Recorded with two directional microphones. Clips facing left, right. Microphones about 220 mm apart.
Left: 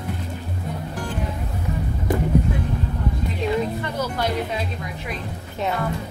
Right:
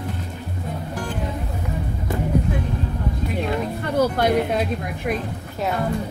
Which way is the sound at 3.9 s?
55° right (ahead or behind).